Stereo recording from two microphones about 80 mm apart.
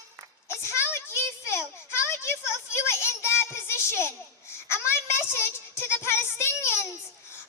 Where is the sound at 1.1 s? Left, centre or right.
Left.